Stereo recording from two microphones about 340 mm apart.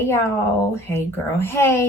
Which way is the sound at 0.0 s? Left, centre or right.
Centre.